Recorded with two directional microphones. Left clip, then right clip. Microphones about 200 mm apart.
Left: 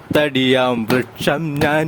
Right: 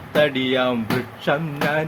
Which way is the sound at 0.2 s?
60° left (ahead or behind).